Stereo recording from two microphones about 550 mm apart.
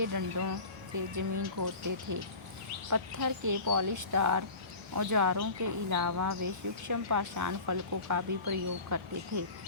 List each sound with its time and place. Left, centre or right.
0.0 s speech: right